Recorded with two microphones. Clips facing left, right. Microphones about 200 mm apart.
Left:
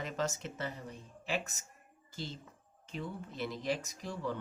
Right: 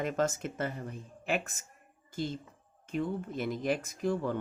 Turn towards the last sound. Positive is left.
turn(degrees=-50)  # may be behind; listen again after turning